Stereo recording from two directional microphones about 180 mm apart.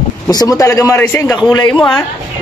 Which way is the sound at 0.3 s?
20° left (ahead or behind).